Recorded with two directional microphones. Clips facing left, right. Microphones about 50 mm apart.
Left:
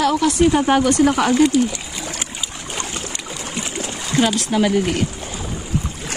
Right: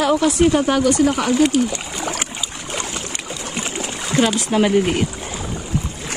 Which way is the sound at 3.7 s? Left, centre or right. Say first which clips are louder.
Right 1 dB; centre.